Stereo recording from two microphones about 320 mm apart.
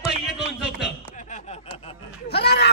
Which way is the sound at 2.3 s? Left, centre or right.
Left.